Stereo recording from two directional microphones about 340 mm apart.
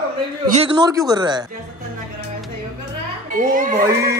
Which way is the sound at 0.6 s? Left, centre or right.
Centre.